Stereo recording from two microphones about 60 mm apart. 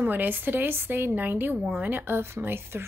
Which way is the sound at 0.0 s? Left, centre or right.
Right.